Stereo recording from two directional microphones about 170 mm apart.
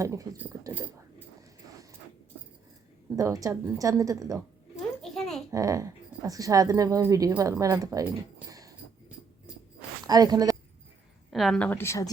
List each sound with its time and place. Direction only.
0.0 s speech: 20° right (ahead or behind)
3.2 s speech: 20° right (ahead or behind)
5.0 s babbling: centre (ahead or behind)
5.5 s speech: 20° right (ahead or behind)
8.4 s a sound: 20° right (ahead or behind)
10.1 s speech: 20° right (ahead or behind)
11.3 s a woman's voice: centre (ahead or behind); by 12.1 s 20° left (ahead or behind)